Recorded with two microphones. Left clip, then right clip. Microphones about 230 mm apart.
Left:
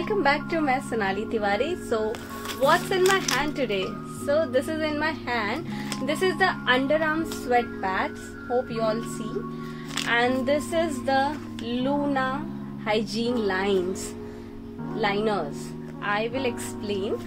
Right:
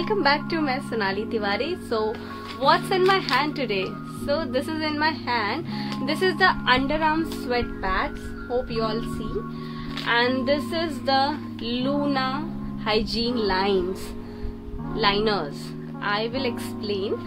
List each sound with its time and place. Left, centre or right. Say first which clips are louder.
0.0 s a woman's voice: right 2 dB; centre
3.1 s a woman's voice: right 2 dB; centre
10.0 s speech: right 2 dB; centre
15.0 s speech: right 3 dB; centre